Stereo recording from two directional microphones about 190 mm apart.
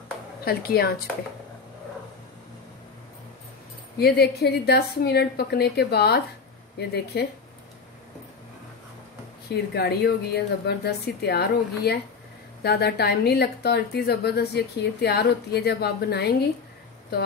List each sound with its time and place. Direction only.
0.5 s speech: 55° left (ahead or behind)
4.0 s a woman's voice: 60° left (ahead or behind)
9.5 s a woman's voice: 60° left (ahead or behind)